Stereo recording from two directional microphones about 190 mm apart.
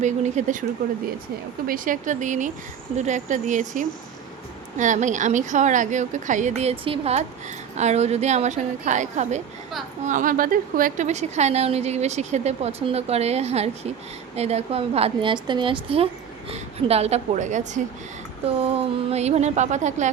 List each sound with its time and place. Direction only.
0.0 s a woman's voice: 40° right (ahead or behind)
1.6 s a woman's voice: 45° right (ahead or behind)